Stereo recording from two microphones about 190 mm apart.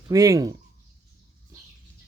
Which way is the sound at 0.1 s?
15° right (ahead or behind).